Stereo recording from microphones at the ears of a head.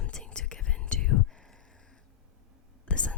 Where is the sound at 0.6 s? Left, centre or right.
Left.